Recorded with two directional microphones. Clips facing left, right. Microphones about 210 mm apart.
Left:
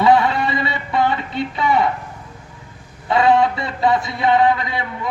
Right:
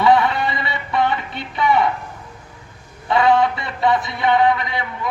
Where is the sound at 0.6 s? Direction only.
25° left (ahead or behind).